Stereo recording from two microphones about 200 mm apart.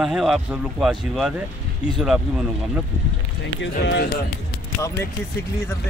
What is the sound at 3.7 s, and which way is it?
Speech, 55° left (ahead or behind).